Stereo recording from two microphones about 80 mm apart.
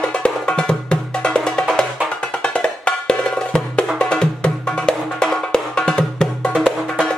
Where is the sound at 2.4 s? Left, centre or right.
Centre.